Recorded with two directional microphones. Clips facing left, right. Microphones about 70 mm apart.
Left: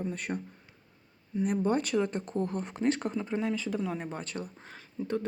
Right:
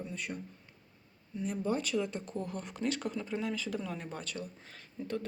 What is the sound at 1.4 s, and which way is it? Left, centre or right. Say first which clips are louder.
Speech: left 5 dB; left.